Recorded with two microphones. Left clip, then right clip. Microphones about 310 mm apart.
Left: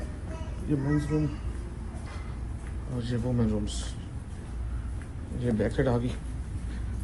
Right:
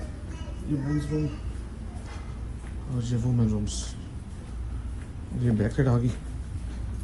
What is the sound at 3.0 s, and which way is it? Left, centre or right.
Speech, right.